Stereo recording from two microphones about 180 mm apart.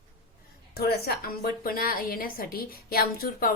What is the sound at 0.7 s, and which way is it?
A woman's voice, 60° left (ahead or behind).